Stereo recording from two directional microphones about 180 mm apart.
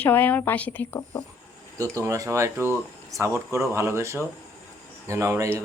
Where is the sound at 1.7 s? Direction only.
20° right (ahead or behind).